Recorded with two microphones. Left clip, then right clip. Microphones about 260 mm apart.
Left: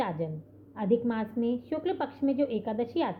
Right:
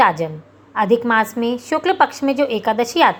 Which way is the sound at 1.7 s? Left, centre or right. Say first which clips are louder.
Right 16 dB; centre.